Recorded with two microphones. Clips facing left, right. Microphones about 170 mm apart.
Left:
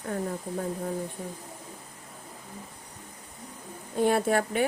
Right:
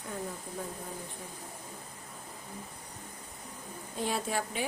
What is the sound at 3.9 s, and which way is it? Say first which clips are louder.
Speech: left 9 dB; 55° left (ahead or behind).